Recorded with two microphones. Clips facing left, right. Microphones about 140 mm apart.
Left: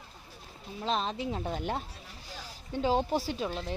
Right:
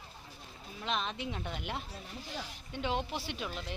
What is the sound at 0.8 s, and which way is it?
Speech, 35° left (ahead or behind).